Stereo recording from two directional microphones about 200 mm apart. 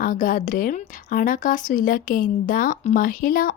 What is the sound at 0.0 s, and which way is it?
Speech, 45° left (ahead or behind).